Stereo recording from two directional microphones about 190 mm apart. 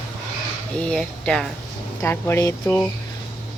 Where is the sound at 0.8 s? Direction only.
5° left (ahead or behind).